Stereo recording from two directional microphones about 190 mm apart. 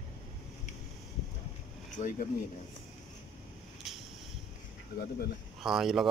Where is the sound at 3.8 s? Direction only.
Centre (ahead or behind).